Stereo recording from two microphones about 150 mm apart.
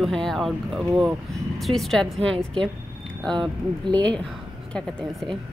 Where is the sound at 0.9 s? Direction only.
20° right (ahead or behind).